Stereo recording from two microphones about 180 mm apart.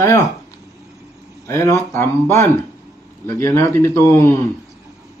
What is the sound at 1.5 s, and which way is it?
Speech, 15° left (ahead or behind).